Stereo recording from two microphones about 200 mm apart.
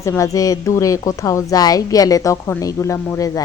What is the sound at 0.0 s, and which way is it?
A woman's voice, 15° left (ahead or behind).